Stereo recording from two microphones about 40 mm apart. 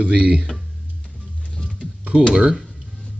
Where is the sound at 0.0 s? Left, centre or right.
Right.